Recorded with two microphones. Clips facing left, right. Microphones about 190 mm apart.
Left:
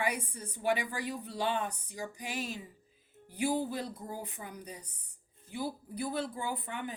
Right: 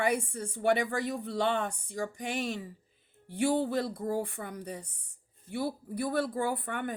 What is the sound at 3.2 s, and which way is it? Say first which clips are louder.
A woman's voice: right 4 dB; 70° right (ahead or behind).